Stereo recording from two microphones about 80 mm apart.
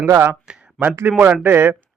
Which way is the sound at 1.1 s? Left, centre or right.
Centre.